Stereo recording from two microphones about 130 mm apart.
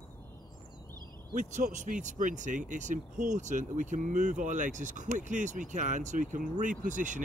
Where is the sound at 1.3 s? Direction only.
70° right (ahead or behind).